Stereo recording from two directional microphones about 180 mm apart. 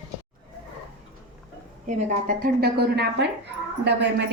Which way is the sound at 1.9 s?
40° right (ahead or behind).